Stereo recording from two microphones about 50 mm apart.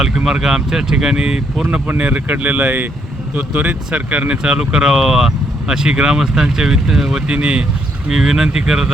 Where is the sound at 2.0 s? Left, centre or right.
Right.